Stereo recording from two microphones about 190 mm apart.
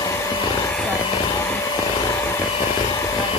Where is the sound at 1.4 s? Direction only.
15° left (ahead or behind).